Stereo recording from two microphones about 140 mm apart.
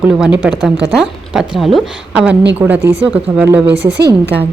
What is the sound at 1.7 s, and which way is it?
A woman's voice, 5° right (ahead or behind).